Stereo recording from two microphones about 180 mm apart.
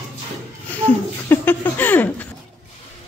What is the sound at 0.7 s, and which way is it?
Speech, 10° left (ahead or behind).